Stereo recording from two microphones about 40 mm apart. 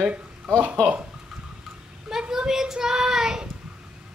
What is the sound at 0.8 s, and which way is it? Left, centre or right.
Speech, left.